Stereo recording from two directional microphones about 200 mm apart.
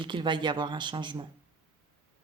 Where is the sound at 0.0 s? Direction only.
25° right (ahead or behind).